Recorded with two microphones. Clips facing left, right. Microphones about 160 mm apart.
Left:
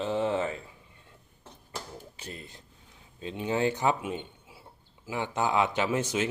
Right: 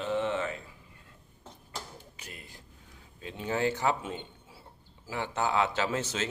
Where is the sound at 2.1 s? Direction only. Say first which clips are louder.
Left 5 dB; 30° left (ahead or behind).